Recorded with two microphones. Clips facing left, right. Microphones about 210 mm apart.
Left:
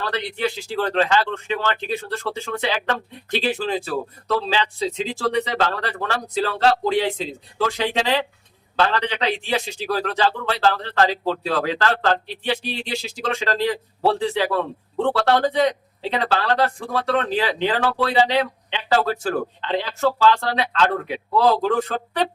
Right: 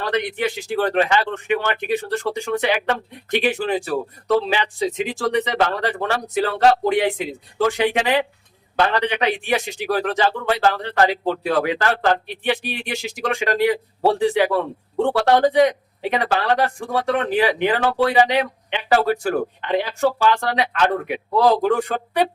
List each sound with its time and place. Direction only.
0.0 s speech: 15° right (ahead or behind)